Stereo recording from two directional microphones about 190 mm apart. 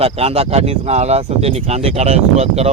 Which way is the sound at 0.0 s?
30° right (ahead or behind).